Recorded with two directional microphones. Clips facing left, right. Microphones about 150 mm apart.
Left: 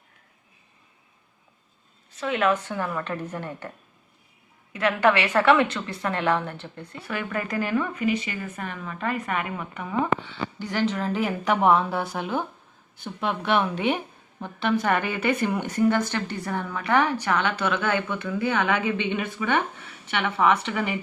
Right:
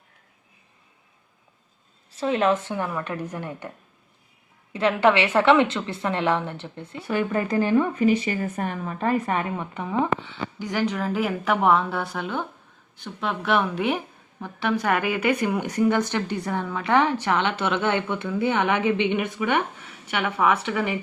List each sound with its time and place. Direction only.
2.1 s a woman's voice: 30° right (ahead or behind)
2.9 s a woman's voice: 10° right (ahead or behind)
4.7 s a woman's voice: 30° right (ahead or behind); by 20.9 s 5° right (ahead or behind)